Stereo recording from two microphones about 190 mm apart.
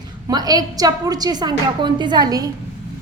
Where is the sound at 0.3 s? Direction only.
20° right (ahead or behind).